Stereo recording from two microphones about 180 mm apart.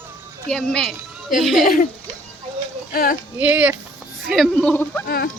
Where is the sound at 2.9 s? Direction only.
55° left (ahead or behind).